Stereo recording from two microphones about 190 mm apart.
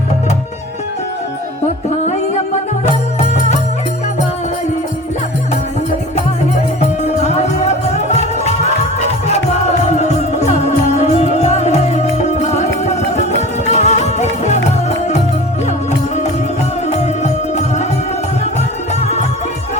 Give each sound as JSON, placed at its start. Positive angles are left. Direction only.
{"t": 2.8, "sound": "music", "side_deg": 35}
{"t": 6.7, "sound": "music", "side_deg": 35}
{"t": 17.0, "sound": "music", "side_deg": 35}
{"t": 18.9, "sound": "music", "side_deg": 35}